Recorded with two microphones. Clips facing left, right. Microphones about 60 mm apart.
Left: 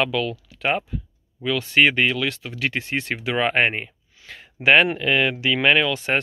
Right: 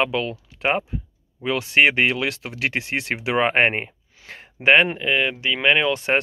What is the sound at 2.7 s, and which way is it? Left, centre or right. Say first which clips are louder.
Speech: right 1 dB; right.